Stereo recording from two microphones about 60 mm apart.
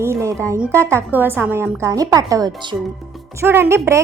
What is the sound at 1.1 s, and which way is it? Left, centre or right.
Speech, right.